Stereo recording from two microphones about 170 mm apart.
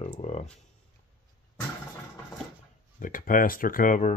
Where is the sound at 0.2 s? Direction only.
40° left (ahead or behind).